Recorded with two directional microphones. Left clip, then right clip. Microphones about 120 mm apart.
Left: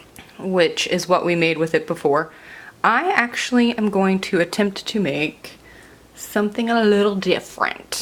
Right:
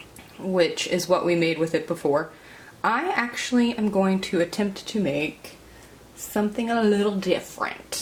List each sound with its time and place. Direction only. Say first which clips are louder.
0.5 s speech: left 4 dB; 35° left (ahead or behind)